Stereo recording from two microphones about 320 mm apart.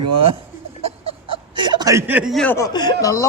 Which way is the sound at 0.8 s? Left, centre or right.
Right.